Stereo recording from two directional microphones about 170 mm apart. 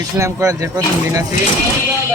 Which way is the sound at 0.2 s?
15° right (ahead or behind).